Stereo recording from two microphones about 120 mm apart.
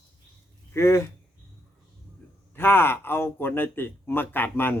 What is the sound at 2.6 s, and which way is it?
Speech, 20° left (ahead or behind).